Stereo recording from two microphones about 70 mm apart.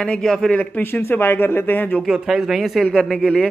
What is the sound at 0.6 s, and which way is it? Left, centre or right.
Speech, left.